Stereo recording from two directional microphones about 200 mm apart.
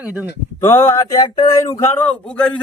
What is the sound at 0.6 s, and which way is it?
A man's voice, 10° left (ahead or behind).